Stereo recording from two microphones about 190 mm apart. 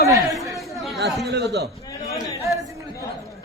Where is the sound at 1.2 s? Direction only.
60° right (ahead or behind).